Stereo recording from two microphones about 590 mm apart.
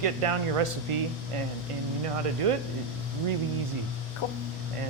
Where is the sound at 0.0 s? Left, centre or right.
Right.